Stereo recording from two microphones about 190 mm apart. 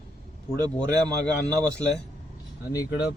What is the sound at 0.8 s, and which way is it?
A man's voice, 5° left (ahead or behind).